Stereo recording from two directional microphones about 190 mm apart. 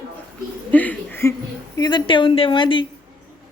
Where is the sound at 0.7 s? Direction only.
10° left (ahead or behind).